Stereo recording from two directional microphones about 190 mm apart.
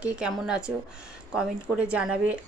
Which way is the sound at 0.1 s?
5° right (ahead or behind).